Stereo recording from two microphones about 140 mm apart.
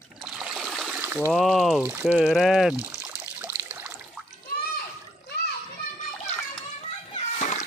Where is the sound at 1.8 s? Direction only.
10° right (ahead or behind).